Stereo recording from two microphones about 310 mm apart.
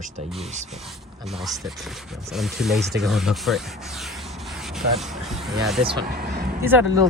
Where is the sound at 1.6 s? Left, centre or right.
Centre.